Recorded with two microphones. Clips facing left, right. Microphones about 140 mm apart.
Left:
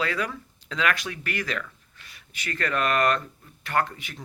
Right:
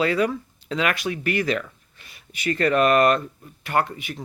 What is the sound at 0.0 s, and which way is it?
Speech, 25° right (ahead or behind).